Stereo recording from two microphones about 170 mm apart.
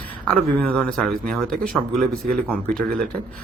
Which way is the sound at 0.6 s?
5° left (ahead or behind).